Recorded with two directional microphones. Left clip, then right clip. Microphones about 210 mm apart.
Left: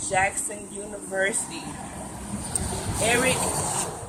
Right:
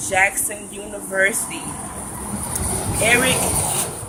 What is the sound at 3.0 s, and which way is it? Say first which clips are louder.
Speech: right 6 dB; 5° right (ahead or behind).